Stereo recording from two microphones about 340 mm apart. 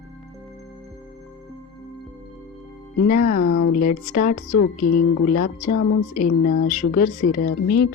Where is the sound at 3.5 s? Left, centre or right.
Left.